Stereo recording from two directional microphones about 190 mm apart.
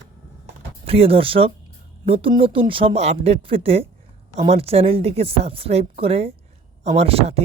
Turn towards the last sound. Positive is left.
turn(degrees=-30)  # may be behind; listen again after turning